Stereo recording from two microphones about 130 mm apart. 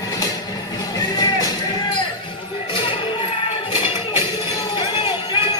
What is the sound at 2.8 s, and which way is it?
Music, 40° left (ahead or behind).